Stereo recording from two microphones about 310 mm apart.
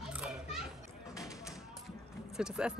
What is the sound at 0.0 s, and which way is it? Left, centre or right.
Children playing, centre.